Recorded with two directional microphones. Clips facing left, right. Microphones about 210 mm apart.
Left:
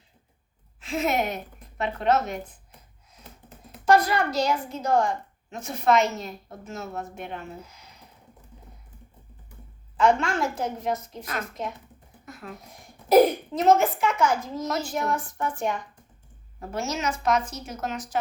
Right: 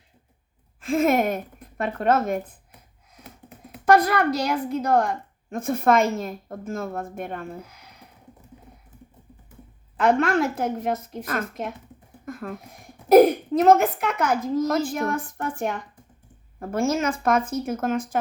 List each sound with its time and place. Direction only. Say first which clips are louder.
0.8 s a woman's voice: right 6 dB; 50° right (ahead or behind)
3.7 s a woman's voice: right 2 dB; 55° right (ahead or behind)
10.0 s a woman's voice: right 2 dB; 55° right (ahead or behind)
12.2 s a sound: right 7 dB; 50° right (ahead or behind)
13.1 s a woman's voice: right 4 dB; 55° right (ahead or behind)